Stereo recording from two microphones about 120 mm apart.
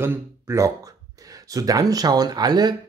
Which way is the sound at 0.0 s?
20° right (ahead or behind).